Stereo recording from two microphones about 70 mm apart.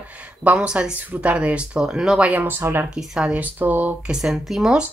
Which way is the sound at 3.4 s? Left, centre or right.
Right.